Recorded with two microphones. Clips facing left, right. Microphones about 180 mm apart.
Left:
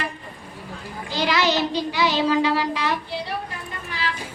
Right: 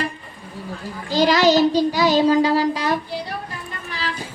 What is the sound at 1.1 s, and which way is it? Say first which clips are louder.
Child singing: right 7 dB; 40° right (ahead or behind).